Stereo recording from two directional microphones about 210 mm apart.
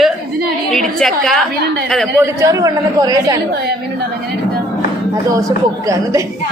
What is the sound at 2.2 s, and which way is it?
Speech, 15° right (ahead or behind).